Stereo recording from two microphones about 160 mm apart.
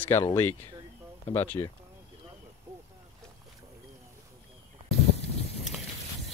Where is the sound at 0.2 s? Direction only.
15° left (ahead or behind).